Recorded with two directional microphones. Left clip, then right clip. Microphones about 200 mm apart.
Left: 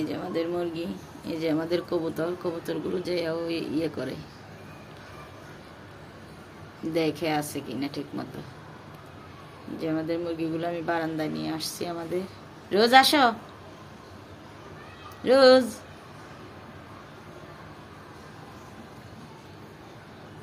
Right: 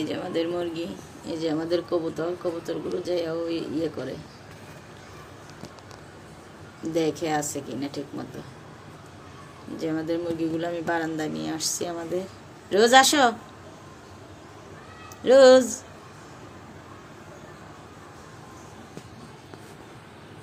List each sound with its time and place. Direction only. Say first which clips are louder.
0.0 s speech: right 2 dB; centre (ahead or behind)
6.9 s speech: right 1 dB; centre (ahead or behind)
9.7 s speech: right 1 dB; 5° right (ahead or behind)
15.2 s speech: right 3 dB; centre (ahead or behind)